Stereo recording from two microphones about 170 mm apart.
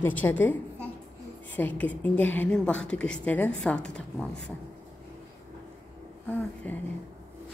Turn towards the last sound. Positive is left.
turn(degrees=10)  # may be behind; listen again after turning